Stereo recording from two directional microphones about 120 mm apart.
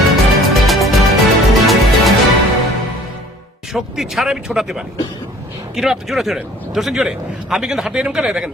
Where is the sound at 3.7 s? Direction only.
Centre (ahead or behind).